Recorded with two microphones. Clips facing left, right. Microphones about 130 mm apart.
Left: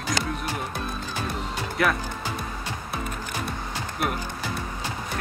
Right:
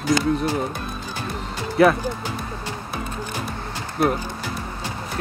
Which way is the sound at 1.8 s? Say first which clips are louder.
Right 9 dB; 30° right (ahead or behind).